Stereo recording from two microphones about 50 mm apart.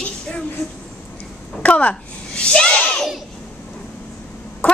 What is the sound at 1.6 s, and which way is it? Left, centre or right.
Speech, left.